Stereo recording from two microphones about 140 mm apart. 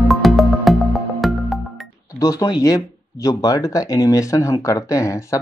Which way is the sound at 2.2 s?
25° left (ahead or behind).